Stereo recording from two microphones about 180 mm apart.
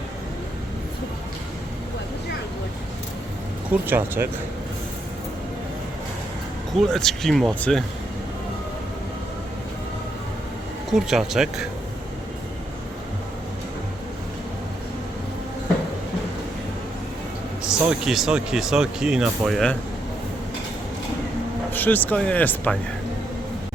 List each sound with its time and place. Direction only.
3.7 s speech: 10° right (ahead or behind)
6.9 s speech: centre (ahead or behind)
10.9 s speech: centre (ahead or behind)
17.6 s speech: 5° right (ahead or behind)
21.7 s speech: 10° left (ahead or behind)